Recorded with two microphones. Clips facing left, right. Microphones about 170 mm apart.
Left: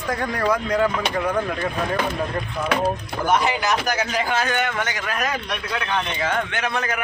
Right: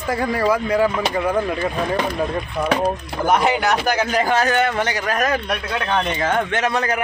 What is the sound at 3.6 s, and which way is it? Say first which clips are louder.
Speech: right 3 dB; 60° right (ahead or behind).